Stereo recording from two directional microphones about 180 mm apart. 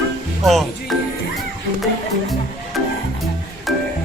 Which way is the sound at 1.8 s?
Centre (ahead or behind).